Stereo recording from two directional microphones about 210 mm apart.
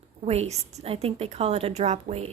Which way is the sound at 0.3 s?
30° right (ahead or behind).